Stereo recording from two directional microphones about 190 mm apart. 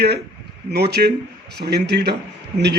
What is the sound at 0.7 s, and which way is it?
A man's voice, 60° right (ahead or behind).